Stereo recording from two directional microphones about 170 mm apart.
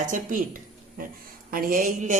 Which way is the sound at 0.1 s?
50° right (ahead or behind).